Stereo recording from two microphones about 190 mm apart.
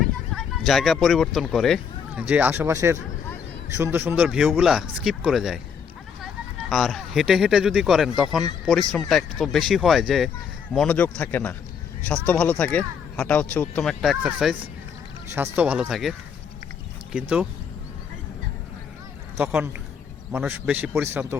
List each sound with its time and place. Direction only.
0.0 s a man's voice: centre (ahead or behind)
19.4 s a man's voice: 10° right (ahead or behind)